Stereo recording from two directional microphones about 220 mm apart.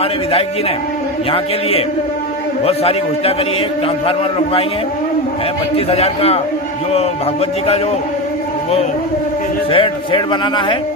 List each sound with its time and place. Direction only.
2.6 s a man's voice: 25° left (ahead or behind)
5.9 s a man's voice: 25° left (ahead or behind)
9.7 s a man's voice: 25° left (ahead or behind)